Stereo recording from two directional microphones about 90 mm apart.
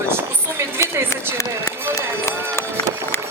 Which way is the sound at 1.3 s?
35° left (ahead or behind).